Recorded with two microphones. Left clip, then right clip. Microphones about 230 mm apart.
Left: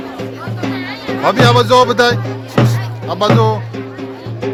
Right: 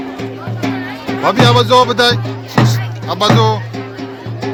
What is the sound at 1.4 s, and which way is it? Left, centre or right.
Music, centre.